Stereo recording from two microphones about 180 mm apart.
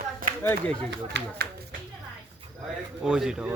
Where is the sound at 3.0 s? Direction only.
5° right (ahead or behind).